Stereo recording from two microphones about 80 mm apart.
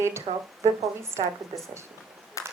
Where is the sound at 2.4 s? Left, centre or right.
Left.